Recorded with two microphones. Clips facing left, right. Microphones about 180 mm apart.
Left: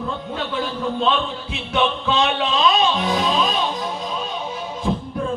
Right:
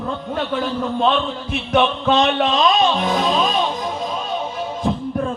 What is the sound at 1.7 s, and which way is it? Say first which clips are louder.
Speech: right 4 dB; 45° right (ahead or behind).